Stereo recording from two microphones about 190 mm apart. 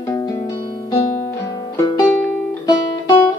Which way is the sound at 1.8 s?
20° left (ahead or behind).